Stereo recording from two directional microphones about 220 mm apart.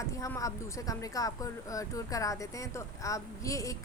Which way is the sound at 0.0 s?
15° left (ahead or behind).